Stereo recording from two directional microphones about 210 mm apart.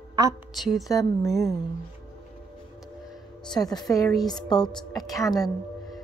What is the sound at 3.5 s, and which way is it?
A woman's voice, 20° left (ahead or behind).